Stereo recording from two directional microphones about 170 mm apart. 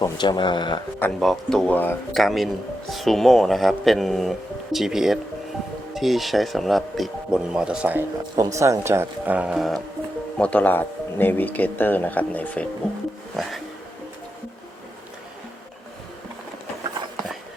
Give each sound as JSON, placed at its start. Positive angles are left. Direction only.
{"t": 0.0, "sound": "speech", "side_deg": 25}
{"t": 0.9, "sound": "speech", "side_deg": 5}
{"t": 2.1, "sound": "speech", "side_deg": 0}